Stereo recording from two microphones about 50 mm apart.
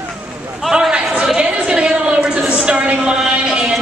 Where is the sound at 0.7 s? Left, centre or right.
Centre.